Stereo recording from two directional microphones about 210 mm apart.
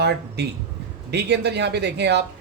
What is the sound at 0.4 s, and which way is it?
Speech, 50° right (ahead or behind).